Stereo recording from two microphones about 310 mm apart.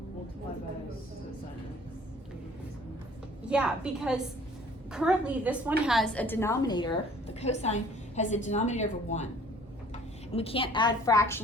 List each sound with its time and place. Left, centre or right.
3.4 s a woman's voice: centre; by 9.3 s left
10.3 s a woman's voice: centre